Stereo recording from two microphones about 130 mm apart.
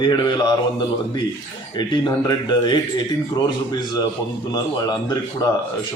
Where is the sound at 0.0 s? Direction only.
35° left (ahead or behind).